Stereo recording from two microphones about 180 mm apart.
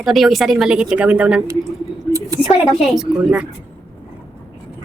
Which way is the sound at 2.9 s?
5° right (ahead or behind).